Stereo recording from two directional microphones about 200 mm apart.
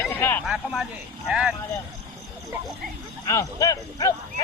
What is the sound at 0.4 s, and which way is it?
Speech, centre (ahead or behind).